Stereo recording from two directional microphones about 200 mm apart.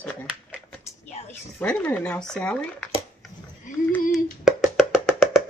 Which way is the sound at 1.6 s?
10° left (ahead or behind).